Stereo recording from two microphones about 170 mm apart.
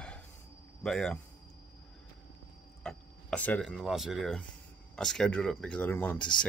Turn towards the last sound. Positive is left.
turn(degrees=10)  # may be behind; listen again after turning